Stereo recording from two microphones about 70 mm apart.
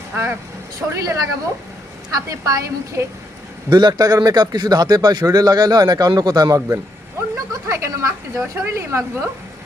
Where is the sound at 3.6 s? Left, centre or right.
Right.